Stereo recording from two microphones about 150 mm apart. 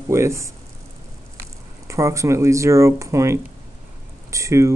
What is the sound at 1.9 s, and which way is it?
Speech, 20° right (ahead or behind).